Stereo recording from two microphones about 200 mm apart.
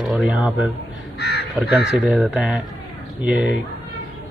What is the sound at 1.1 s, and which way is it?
Speech, 55° left (ahead or behind).